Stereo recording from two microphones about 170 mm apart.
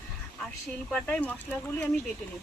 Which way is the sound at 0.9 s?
10° left (ahead or behind).